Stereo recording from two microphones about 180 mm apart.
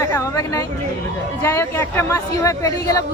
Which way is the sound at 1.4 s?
15° left (ahead or behind).